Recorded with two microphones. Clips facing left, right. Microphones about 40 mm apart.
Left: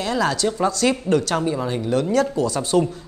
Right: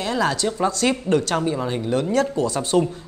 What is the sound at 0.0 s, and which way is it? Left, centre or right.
A man's voice, right.